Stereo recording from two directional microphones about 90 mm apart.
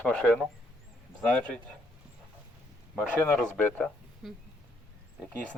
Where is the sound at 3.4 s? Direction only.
10° left (ahead or behind).